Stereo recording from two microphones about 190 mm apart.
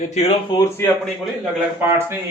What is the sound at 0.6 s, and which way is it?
Speech, 15° left (ahead or behind).